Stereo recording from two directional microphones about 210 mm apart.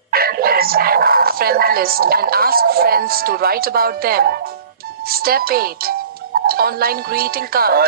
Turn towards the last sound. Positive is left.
turn(degrees=-45)  # may be behind; listen again after turning